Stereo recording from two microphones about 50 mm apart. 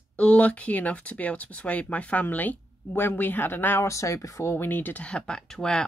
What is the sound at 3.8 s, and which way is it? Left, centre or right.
Speech, left.